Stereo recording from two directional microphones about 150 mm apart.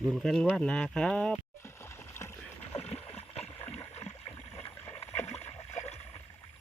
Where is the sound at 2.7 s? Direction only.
45° left (ahead or behind).